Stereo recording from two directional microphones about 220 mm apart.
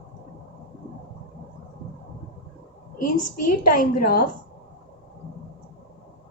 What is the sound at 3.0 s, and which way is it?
A woman's voice, 40° left (ahead or behind).